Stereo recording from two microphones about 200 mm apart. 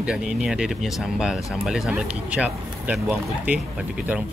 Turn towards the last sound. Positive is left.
turn(degrees=-5)  # may be behind; listen again after turning